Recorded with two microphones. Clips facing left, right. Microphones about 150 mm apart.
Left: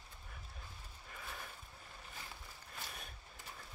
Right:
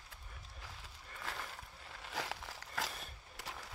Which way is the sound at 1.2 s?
90° right.